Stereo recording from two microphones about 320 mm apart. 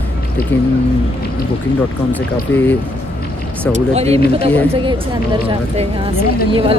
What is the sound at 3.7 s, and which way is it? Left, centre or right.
Speech, centre.